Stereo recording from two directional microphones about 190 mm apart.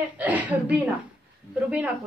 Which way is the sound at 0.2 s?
10° right (ahead or behind).